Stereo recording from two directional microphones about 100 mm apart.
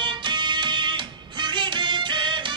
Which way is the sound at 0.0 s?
50° right (ahead or behind).